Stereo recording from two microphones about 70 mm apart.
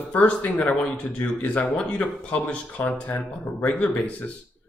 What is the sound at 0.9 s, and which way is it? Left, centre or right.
Speech, left.